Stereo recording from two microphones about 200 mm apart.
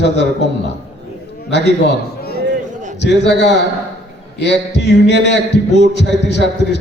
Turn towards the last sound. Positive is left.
turn(degrees=60)  # may be behind; listen again after turning